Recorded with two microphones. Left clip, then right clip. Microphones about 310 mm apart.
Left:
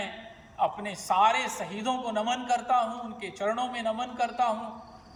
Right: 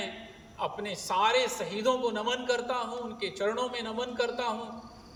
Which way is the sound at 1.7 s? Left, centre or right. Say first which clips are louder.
Right 2 dB; centre.